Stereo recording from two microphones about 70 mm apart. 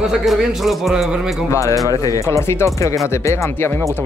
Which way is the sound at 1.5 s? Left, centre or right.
Left.